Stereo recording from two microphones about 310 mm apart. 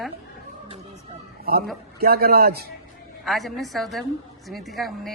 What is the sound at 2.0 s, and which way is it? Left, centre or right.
Speech, right.